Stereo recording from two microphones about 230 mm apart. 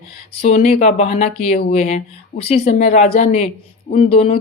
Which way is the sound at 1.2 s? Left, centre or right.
Left.